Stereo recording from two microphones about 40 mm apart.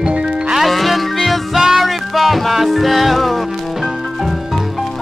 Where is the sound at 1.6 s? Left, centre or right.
Centre.